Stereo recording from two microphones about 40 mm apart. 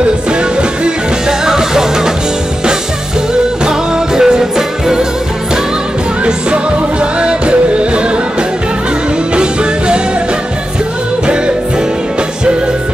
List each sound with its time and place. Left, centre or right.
0.3 s music: right
1.4 s music: centre
3.6 s music: centre
6.2 s music: right